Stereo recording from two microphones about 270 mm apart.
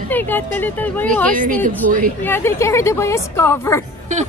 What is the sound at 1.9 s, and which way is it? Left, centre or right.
Speech, right.